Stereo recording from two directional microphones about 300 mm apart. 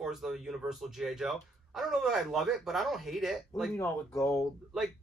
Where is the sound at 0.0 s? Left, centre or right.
Centre.